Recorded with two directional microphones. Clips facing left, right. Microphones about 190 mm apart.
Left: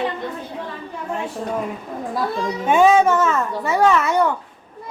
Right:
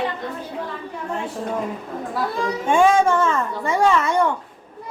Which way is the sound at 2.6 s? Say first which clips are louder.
Left 2 dB; 5° left (ahead or behind).